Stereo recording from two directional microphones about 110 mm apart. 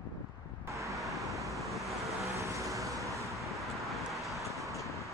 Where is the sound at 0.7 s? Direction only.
30° right (ahead or behind).